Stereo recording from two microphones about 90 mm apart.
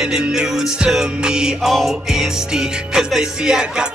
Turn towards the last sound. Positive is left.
turn(degrees=-5)  # may be behind; listen again after turning